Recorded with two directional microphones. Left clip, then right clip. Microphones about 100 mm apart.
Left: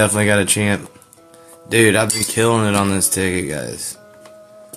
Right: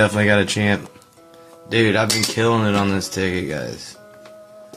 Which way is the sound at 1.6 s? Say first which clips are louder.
Left 3 dB; 70° left (ahead or behind).